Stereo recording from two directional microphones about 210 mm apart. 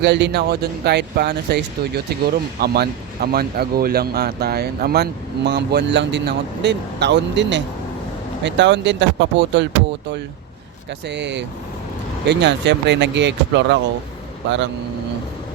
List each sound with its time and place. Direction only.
0.0 s speech: 55° right (ahead or behind)
11.1 s speech: 55° right (ahead or behind)